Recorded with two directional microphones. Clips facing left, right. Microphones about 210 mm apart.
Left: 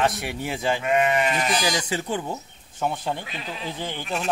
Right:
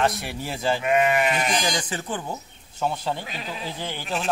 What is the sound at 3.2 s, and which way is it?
Speech, 40° right (ahead or behind).